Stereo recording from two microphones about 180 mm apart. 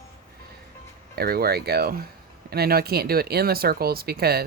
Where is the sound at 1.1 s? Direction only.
60° right (ahead or behind).